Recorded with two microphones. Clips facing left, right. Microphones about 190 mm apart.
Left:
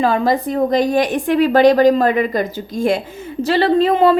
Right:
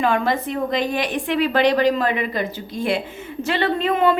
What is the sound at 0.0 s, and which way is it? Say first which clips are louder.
A woman's voice: left 4 dB; 35° left (ahead or behind).